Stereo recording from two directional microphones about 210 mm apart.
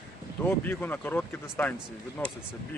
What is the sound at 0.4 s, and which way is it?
Speech, 10° left (ahead or behind).